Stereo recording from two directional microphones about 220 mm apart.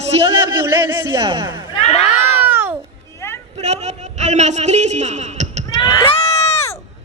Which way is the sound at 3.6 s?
30° right (ahead or behind).